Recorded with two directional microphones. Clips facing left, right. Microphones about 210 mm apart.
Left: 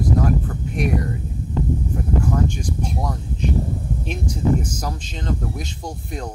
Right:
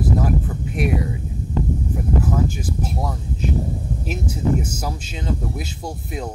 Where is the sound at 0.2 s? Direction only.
5° right (ahead or behind).